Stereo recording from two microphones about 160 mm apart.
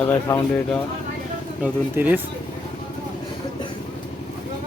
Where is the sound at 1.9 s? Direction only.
10° right (ahead or behind).